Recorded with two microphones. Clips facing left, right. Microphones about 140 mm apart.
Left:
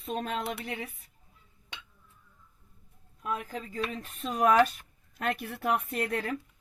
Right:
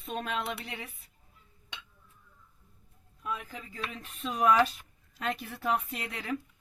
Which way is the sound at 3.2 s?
50° left (ahead or behind).